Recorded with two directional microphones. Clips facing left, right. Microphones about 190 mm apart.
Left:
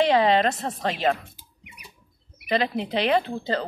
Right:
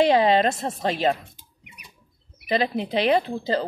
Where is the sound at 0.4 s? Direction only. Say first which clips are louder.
Right 1 dB; 30° right (ahead or behind).